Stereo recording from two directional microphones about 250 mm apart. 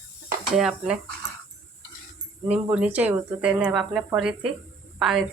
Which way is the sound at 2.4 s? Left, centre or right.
Centre.